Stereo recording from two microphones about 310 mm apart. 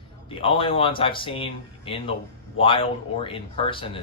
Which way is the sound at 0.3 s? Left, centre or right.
Centre.